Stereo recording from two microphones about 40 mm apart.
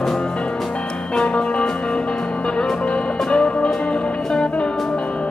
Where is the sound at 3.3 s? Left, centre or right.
Left.